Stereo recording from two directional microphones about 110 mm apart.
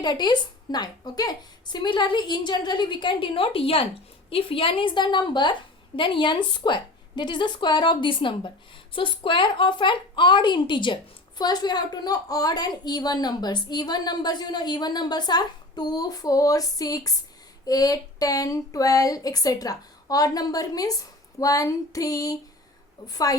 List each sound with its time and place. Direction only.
0.0 s a woman's voice: 40° left (ahead or behind)